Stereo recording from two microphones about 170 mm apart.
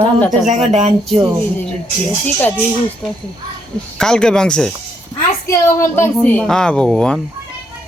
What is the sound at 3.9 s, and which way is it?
Speech, 5° left (ahead or behind).